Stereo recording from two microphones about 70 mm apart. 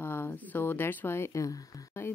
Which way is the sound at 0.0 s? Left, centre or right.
Left.